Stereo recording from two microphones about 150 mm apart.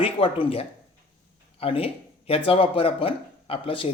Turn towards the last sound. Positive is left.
turn(degrees=35)  # may be behind; listen again after turning